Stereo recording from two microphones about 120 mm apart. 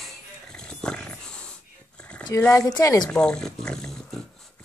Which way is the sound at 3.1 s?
5° left (ahead or behind).